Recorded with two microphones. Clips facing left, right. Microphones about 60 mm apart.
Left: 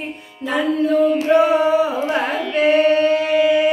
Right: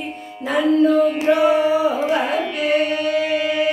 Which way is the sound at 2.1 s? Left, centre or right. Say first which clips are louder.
Even; left.